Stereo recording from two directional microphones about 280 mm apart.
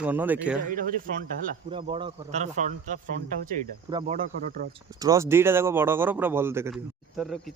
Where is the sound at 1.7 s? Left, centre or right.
Centre.